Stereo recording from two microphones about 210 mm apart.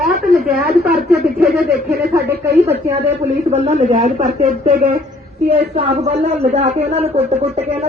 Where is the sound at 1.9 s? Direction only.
50° right (ahead or behind).